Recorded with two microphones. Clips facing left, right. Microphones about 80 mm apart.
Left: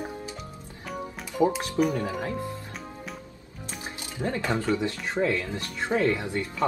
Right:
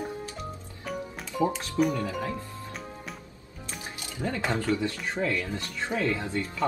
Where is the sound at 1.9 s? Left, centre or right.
Left.